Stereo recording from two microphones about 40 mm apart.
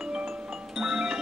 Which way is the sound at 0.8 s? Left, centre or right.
Centre.